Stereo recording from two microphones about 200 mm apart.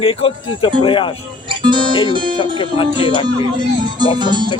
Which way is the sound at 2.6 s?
25° left (ahead or behind).